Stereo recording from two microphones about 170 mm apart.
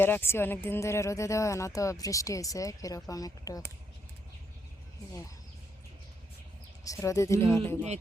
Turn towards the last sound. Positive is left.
turn(degrees=15)  # may be behind; listen again after turning